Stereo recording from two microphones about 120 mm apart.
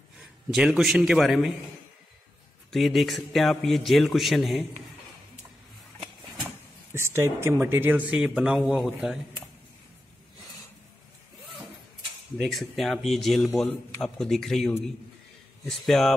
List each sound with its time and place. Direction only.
0.5 s a man's voice: 5° right (ahead or behind)
2.7 s a man's voice: centre (ahead or behind)
6.4 s speech: 20° right (ahead or behind); by 9.2 s 5° right (ahead or behind)
12.4 s a man's voice: centre (ahead or behind)